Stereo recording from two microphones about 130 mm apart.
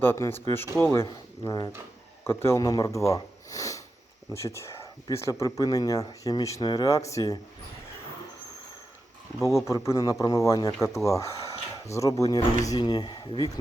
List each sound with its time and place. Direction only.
0.0 s speech: 15° left (ahead or behind)
1.5 s speech: 30° left (ahead or behind)
2.2 s speech: 20° left (ahead or behind)
9.4 s speech: 20° left (ahead or behind)